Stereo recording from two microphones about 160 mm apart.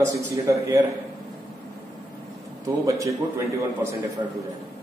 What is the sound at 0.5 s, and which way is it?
Speech, 20° right (ahead or behind).